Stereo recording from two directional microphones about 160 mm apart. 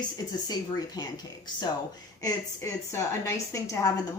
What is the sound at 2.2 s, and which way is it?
A woman's voice, 20° left (ahead or behind).